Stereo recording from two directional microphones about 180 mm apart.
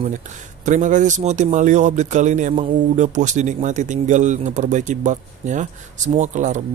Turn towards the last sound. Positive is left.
turn(degrees=-45)  # may be behind; listen again after turning